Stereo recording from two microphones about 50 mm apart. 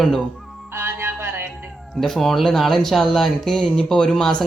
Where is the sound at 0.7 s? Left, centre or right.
Right.